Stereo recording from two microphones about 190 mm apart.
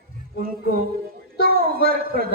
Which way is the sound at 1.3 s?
50° right (ahead or behind).